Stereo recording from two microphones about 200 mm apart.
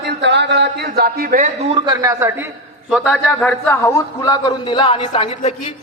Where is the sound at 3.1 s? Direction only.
10° left (ahead or behind).